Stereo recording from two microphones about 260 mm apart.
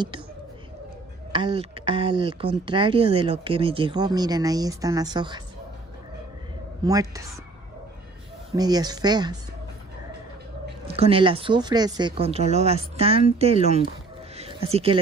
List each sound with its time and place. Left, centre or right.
1.3 s speech: right
6.8 s speech: centre
8.5 s speech: centre
10.9 s speech: right
14.3 s a sound: right